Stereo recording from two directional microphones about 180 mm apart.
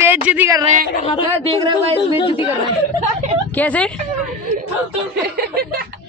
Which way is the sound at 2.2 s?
30° left (ahead or behind).